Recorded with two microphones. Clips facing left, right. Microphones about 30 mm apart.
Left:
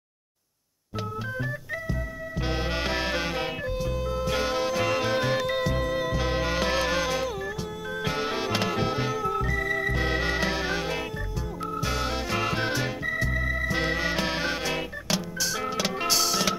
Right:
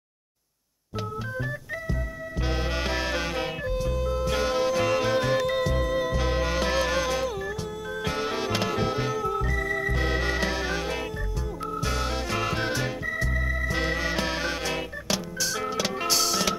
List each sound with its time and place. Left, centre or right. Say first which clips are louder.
2.4 s music: even; centre